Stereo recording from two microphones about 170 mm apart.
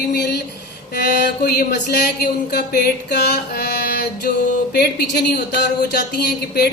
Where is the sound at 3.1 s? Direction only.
75° left (ahead or behind).